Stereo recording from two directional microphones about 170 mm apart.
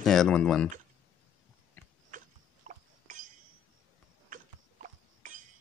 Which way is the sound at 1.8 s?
10° left (ahead or behind).